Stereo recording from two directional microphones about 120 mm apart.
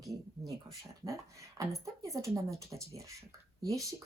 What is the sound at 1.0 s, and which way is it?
Speech, 25° right (ahead or behind).